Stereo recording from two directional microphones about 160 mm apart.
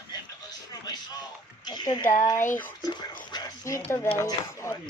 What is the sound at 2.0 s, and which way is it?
Speech, 50° left (ahead or behind).